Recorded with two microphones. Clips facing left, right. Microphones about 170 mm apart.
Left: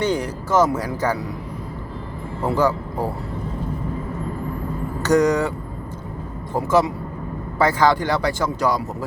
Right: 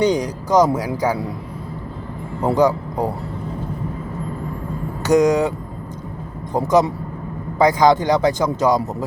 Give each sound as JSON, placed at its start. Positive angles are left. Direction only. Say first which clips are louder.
{"t": 0.0, "sound": "speech", "louder": "right 4 dB", "side_deg": -15}
{"t": 2.4, "sound": "a man's voice", "louder": "right 4 dB", "side_deg": -15}
{"t": 5.0, "sound": "speech", "louder": "right 2 dB", "side_deg": -15}